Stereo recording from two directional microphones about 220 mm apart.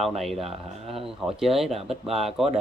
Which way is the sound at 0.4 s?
25° right (ahead or behind).